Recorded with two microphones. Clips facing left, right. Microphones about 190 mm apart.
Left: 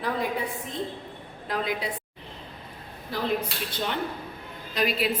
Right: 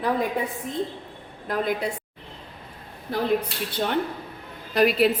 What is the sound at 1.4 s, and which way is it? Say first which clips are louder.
Speech: right 4 dB; 50° right (ahead or behind).